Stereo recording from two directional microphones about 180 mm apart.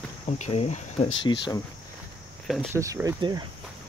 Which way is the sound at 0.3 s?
40° left (ahead or behind).